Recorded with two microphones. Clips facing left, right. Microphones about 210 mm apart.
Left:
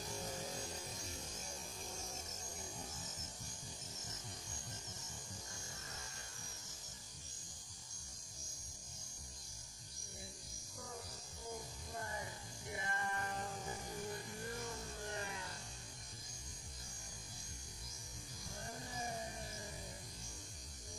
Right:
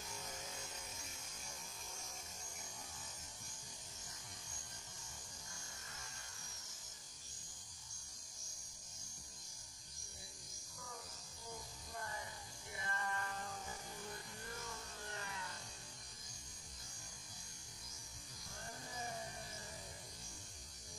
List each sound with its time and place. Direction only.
0.0 s music: 35° left (ahead or behind)
12.7 s music: 20° left (ahead or behind)
15.0 s music: 20° left (ahead or behind)